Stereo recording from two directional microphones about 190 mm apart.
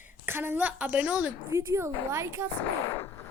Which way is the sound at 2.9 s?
15° left (ahead or behind).